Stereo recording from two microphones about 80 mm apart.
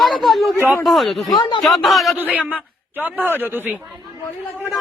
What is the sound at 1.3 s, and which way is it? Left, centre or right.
Speech, left.